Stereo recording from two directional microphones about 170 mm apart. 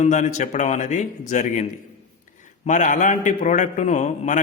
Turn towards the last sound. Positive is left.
turn(degrees=45)  # may be behind; listen again after turning